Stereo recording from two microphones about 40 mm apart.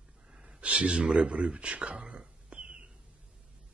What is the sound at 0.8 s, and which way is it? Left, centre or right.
Speech, right.